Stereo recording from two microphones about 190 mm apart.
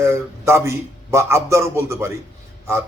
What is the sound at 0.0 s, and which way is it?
A man's voice, 15° right (ahead or behind).